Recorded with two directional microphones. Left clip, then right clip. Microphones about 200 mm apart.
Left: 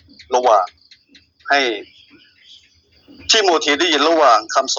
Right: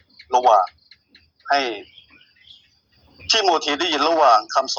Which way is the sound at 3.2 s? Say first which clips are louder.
Left 4 dB; 10° left (ahead or behind).